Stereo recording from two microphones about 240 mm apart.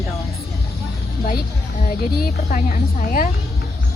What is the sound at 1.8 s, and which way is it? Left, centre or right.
A woman's voice, left.